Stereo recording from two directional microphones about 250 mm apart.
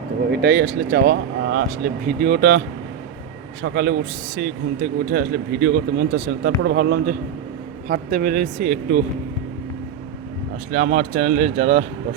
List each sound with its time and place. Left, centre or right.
0.3 s speech: right
3.6 s speech: right
10.7 s speech: right